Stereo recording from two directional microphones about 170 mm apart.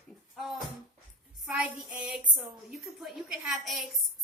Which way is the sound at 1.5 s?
5° right (ahead or behind).